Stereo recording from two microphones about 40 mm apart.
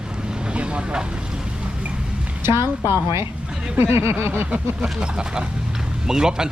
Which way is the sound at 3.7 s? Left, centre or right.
Right.